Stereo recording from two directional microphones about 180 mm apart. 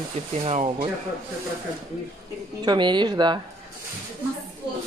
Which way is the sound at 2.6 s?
25° right (ahead or behind).